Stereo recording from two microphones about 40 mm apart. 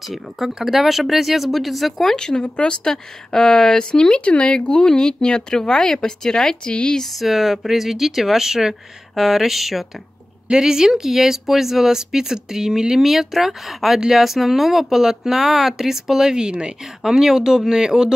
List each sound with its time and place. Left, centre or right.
0.0 s speech: centre
2.1 s speech: left
2.9 s speech: centre
7.2 s speech: centre
10.5 s speech: centre
17.0 s speech: centre